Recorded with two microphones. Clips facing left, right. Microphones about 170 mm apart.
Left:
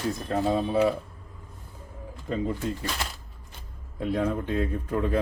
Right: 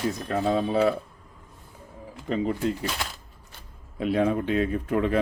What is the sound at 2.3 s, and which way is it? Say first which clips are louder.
Speech: right 3 dB; 75° right (ahead or behind).